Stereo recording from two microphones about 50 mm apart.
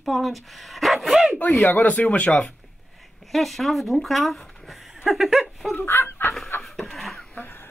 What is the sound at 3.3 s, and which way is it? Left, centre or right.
Speech, centre.